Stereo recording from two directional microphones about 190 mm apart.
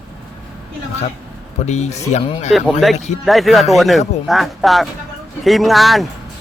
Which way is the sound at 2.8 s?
Centre (ahead or behind).